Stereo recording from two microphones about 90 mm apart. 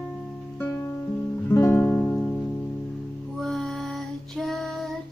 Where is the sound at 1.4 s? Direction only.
25° left (ahead or behind).